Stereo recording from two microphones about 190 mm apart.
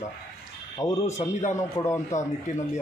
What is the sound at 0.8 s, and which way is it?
A man's voice, 15° left (ahead or behind).